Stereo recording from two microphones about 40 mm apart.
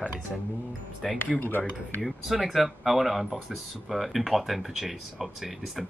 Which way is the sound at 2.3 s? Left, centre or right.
Centre.